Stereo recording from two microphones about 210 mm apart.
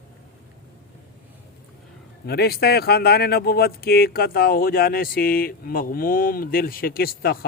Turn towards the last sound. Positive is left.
turn(degrees=45)  # may be behind; listen again after turning